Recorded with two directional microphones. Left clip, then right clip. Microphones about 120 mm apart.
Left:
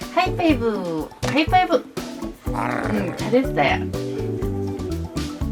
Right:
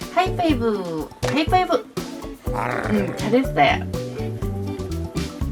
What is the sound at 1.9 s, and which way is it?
Music, centre (ahead or behind).